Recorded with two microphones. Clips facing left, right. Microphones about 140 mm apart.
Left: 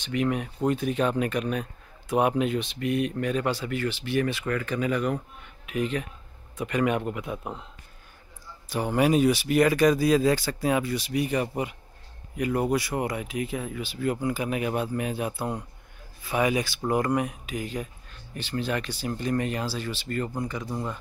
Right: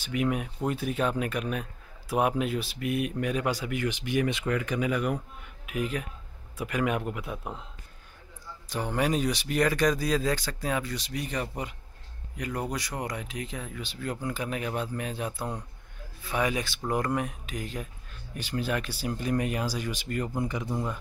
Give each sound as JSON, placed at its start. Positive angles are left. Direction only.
{"t": 0.0, "sound": "a man's voice", "side_deg": -5}
{"t": 8.6, "sound": "speech", "side_deg": 10}
{"t": 18.3, "sound": "a man's voice", "side_deg": -10}
{"t": 20.7, "sound": "a man's voice", "side_deg": -10}